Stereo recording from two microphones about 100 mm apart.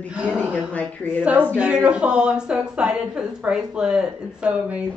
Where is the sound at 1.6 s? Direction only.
10° right (ahead or behind).